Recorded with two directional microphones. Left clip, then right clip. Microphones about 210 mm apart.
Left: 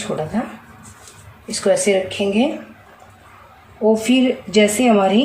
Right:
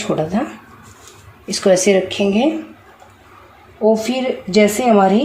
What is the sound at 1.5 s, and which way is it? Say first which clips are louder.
Speech: right 3 dB; 40° right (ahead or behind).